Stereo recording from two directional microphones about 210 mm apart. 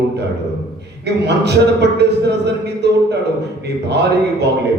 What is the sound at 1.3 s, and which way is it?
Speech, 55° right (ahead or behind).